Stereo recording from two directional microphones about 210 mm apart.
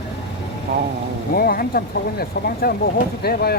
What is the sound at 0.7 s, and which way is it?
Speech, 45° right (ahead or behind).